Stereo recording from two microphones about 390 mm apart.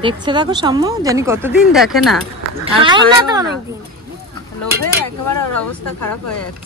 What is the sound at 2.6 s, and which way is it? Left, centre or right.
Speech, centre.